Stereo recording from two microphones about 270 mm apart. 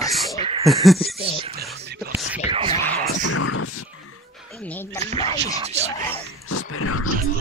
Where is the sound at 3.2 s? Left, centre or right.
Left.